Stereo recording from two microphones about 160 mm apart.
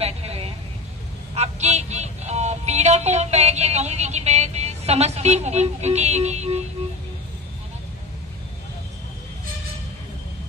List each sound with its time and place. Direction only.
0.0 s vehicle: 40° right (ahead or behind)
1.3 s music: 45° right (ahead or behind)